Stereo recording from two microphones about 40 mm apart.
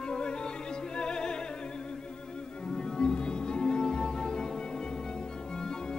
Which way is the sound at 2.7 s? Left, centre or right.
Centre.